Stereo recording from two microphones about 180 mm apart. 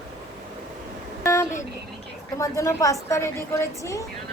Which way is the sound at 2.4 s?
15° left (ahead or behind).